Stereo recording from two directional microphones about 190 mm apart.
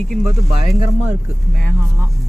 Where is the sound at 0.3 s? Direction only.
15° right (ahead or behind).